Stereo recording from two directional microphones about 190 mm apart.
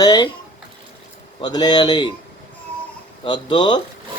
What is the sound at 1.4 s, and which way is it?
Speech, 20° left (ahead or behind).